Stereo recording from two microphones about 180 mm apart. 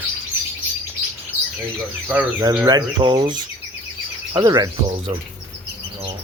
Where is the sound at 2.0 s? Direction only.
15° right (ahead or behind).